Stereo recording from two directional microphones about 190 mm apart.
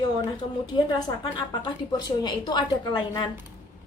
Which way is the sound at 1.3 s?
25° left (ahead or behind).